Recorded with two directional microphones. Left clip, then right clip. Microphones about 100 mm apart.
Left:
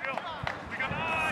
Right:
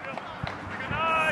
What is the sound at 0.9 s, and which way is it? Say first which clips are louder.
Vehicle: right 7 dB; 25° right (ahead or behind).